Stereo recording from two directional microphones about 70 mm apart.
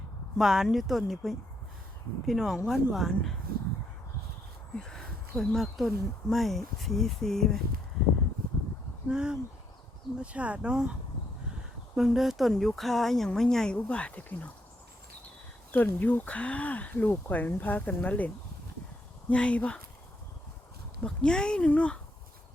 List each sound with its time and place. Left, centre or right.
0.3 s speech: centre
4.8 s a sound: centre
5.5 s speech: centre
9.0 s speech: centre
11.9 s speech: centre; by 14.5 s left
15.7 s speech: left
19.3 s speech: centre
21.0 s speech: centre